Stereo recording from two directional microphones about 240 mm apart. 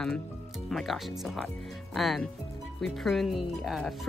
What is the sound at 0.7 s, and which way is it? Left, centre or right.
Speech, centre.